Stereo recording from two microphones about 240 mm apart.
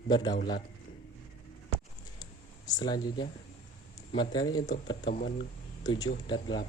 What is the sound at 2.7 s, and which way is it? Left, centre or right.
Speech, centre.